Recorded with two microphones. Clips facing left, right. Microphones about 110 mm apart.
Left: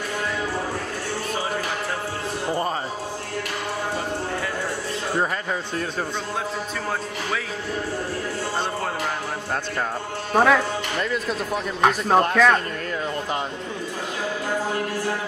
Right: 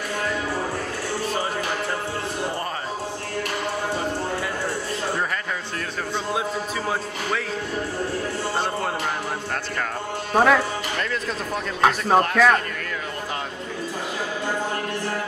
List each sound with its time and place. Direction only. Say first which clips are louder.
10.3 s speech: even; centre (ahead or behind)